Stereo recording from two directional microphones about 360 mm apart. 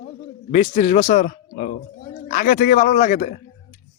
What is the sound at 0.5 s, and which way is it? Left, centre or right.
Speech, left.